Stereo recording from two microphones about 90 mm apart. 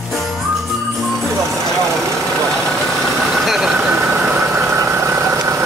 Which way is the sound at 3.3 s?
Centre (ahead or behind).